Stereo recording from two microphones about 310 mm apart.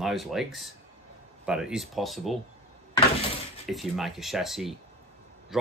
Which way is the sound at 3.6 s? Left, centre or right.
Centre.